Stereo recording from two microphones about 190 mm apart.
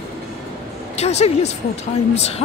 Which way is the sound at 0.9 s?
35° left (ahead or behind).